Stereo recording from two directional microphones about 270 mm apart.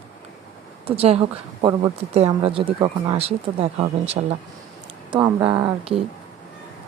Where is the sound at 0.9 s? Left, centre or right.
Right.